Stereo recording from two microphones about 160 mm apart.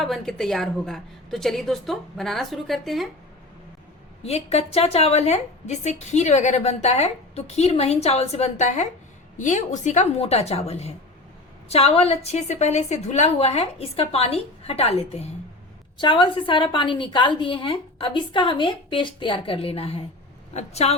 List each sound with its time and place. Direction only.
0.0 s a woman's voice: centre (ahead or behind)
4.2 s a woman's voice: 40° left (ahead or behind)